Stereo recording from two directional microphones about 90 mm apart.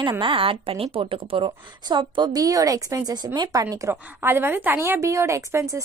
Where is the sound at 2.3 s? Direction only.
40° right (ahead or behind).